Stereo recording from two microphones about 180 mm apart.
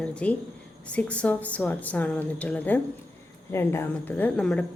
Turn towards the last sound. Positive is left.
turn(degrees=5)  # may be behind; listen again after turning